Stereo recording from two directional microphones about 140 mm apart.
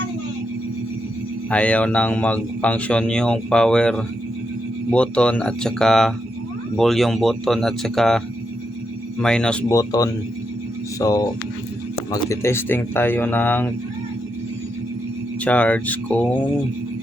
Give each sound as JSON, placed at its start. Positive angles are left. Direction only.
{"t": 1.5, "sound": "a man's voice", "side_deg": 10}
{"t": 9.2, "sound": "speech", "side_deg": 5}
{"t": 9.6, "sound": "a man's voice", "side_deg": 25}
{"t": 15.4, "sound": "a man's voice", "side_deg": 10}